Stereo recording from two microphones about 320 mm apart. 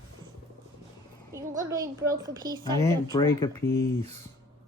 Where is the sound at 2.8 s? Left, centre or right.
Centre.